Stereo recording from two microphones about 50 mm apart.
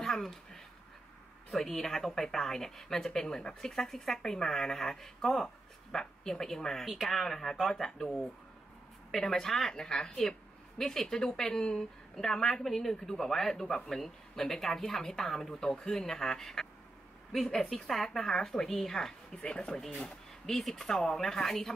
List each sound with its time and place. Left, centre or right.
0.0 s a sound: centre
1.5 s a woman's voice: centre
19.3 s speech: left
20.4 s a woman's voice: centre